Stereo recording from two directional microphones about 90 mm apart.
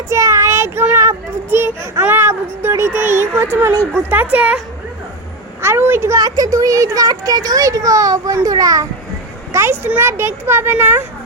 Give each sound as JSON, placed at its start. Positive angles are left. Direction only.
{"t": 0.1, "sound": "a child's voice", "side_deg": -35}
{"t": 4.1, "sound": "a woman's voice", "side_deg": -20}
{"t": 5.6, "sound": "a woman's voice", "side_deg": -25}
{"t": 6.1, "sound": "a child's voice", "side_deg": -45}
{"t": 9.5, "sound": "speech", "side_deg": -30}